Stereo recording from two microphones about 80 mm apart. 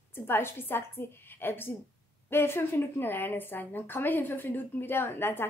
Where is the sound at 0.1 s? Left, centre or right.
Left.